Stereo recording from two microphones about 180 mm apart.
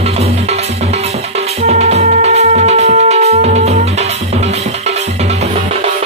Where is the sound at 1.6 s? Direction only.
35° right (ahead or behind).